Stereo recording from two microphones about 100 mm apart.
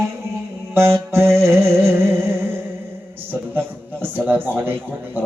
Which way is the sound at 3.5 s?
20° right (ahead or behind).